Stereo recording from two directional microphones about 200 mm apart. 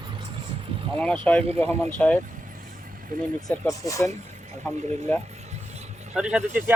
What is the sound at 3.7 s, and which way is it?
Speech, 15° left (ahead or behind).